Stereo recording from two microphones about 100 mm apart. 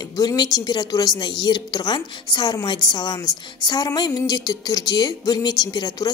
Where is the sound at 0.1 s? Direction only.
40° left (ahead or behind).